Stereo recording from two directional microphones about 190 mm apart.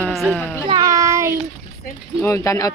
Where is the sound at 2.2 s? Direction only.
15° left (ahead or behind).